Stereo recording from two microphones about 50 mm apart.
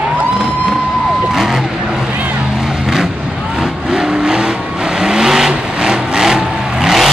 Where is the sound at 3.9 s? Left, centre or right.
Centre.